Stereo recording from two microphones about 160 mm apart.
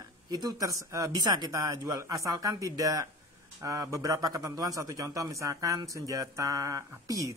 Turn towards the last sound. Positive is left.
turn(degrees=-20)  # may be behind; listen again after turning